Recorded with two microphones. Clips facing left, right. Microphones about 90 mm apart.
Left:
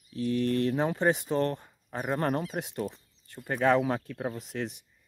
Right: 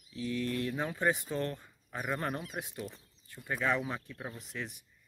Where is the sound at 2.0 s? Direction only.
45° left (ahead or behind).